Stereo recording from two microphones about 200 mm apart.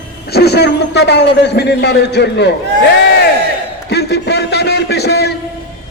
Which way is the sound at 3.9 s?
55° left (ahead or behind).